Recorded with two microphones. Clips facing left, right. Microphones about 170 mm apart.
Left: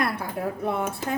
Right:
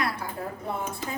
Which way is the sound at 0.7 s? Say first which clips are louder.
Left 5 dB; 65° left (ahead or behind).